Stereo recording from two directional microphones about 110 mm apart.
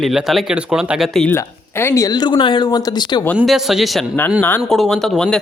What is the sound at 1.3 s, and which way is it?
Speech, 25° left (ahead or behind).